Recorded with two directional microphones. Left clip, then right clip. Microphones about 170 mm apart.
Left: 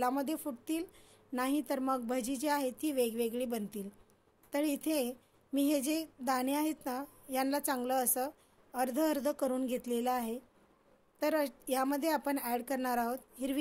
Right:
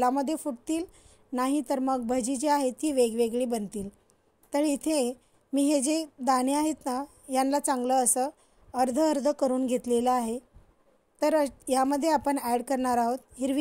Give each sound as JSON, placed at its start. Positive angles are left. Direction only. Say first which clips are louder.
{"t": 0.0, "sound": "a woman's voice", "louder": "right 7 dB", "side_deg": -45}